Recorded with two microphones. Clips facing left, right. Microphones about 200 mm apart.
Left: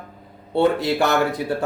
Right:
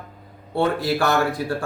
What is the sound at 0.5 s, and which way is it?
Speech, 20° left (ahead or behind).